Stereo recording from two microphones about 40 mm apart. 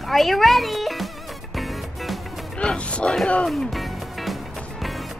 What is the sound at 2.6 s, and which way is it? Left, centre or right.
Music, left.